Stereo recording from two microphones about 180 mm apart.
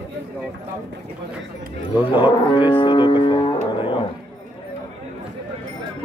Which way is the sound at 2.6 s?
25° left (ahead or behind).